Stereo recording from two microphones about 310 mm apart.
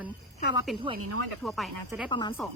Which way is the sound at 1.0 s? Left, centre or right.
Right.